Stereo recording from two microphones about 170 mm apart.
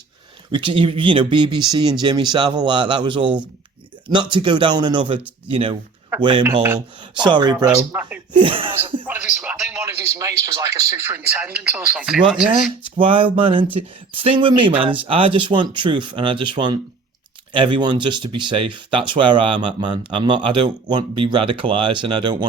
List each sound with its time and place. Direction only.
0.5 s speech: 30° right (ahead or behind)
5.5 s a sound: 30° right (ahead or behind)
6.1 s speech: 30° right (ahead or behind)
7.9 s speech: 10° right (ahead or behind)
8.3 s a sound: 30° right (ahead or behind)
9.0 s speech: 10° right (ahead or behind)
9.8 s speech: 15° right (ahead or behind)
13.0 s a sound: 30° right (ahead or behind)
13.7 s speech: 35° right (ahead or behind)